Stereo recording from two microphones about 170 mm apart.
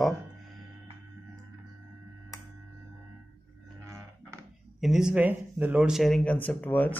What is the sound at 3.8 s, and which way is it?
Cattle, 15° right (ahead or behind).